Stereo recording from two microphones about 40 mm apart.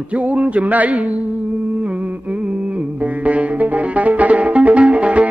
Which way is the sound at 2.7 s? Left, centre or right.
Right.